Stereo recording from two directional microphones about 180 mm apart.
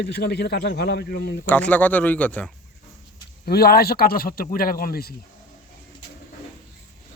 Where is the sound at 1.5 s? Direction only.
10° left (ahead or behind).